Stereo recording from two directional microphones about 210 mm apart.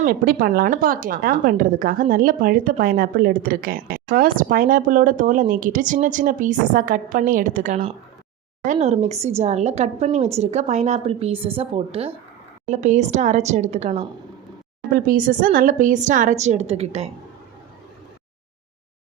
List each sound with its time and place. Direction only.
0.0 s a woman's voice: 45° right (ahead or behind)
14.9 s a woman's voice: 40° right (ahead or behind)